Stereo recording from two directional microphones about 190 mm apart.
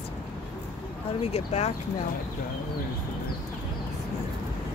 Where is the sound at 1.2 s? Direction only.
35° left (ahead or behind).